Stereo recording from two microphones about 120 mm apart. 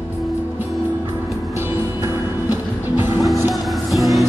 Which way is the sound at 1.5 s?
20° right (ahead or behind).